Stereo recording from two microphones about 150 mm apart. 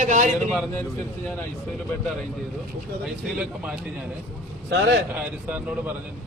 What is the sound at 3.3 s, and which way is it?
Speech, 5° right (ahead or behind).